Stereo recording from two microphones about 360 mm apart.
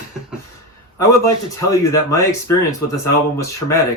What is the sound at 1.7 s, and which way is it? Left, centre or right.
Speech, centre.